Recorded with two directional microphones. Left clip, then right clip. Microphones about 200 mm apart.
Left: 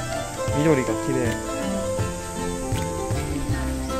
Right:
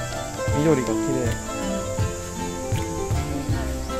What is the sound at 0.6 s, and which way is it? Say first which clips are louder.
Speech: even; 5° left (ahead or behind).